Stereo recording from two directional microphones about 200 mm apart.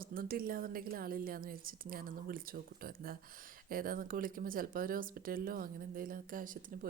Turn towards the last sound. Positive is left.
turn(degrees=-45)  # may be behind; listen again after turning